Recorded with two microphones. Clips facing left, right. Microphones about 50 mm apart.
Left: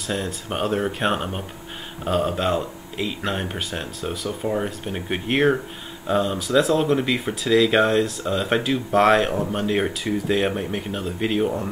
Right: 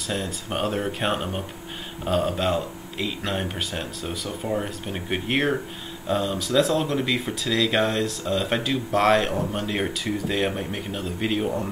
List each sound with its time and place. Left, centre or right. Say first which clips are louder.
0.0 s speech: left 2 dB; centre